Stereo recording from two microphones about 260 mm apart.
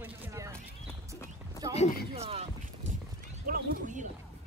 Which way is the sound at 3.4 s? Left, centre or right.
Right.